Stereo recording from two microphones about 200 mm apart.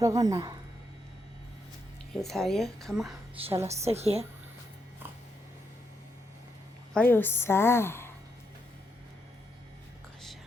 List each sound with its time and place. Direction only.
0.0 s speech: 15° right (ahead or behind)
2.2 s a woman's voice: centre (ahead or behind)
3.7 s a woman's voice: 30° right (ahead or behind)
6.9 s a woman's voice: 10° left (ahead or behind)